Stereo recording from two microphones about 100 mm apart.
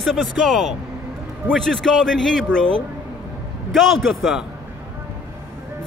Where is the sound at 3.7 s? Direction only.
Centre (ahead or behind).